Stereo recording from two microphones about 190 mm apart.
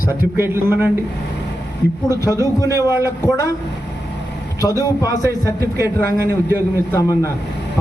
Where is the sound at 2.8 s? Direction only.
15° right (ahead or behind).